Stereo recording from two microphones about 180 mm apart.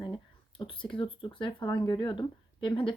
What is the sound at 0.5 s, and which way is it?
Speech, 30° left (ahead or behind).